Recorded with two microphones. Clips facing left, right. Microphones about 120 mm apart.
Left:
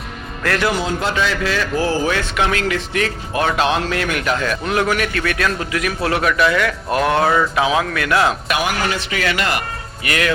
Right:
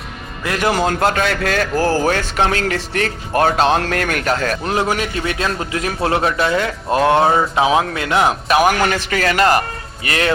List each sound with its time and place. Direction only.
0.7 s a man's voice: 50° right (ahead or behind)
4.8 s a man's voice: 25° right (ahead or behind)
8.4 s a man's voice: 35° right (ahead or behind)
8.9 s a man's voice: 45° right (ahead or behind); by 10.3 s 30° right (ahead or behind)